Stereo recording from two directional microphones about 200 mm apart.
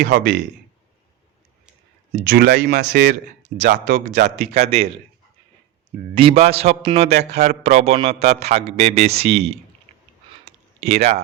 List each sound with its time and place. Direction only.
0.0 s speech: 55° right (ahead or behind)
2.2 s speech: 50° right (ahead or behind)
4.5 s a man's voice: 30° right (ahead or behind)
6.1 s a man's voice: 30° right (ahead or behind)
10.4 s a sound: 30° right (ahead or behind)